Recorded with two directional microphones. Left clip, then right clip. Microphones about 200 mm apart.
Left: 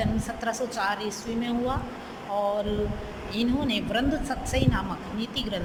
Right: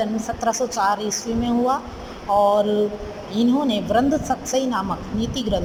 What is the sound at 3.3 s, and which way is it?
Speech, 15° right (ahead or behind).